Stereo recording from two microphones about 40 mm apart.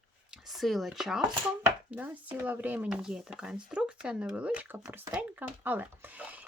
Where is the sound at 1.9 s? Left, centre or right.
Right.